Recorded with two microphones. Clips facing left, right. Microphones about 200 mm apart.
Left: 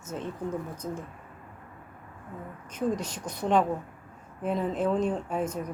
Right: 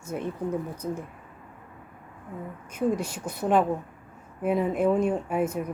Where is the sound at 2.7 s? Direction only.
10° right (ahead or behind).